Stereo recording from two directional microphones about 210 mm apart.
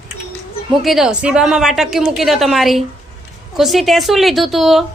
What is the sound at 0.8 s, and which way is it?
A woman's voice, centre (ahead or behind).